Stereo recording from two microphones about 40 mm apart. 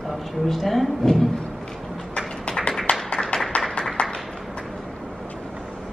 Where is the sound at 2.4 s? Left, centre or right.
Left.